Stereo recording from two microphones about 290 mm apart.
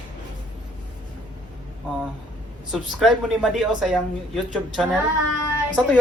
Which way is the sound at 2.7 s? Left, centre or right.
Centre.